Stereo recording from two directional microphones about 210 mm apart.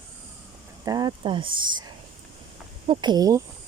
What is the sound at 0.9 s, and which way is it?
Speech, 20° right (ahead or behind).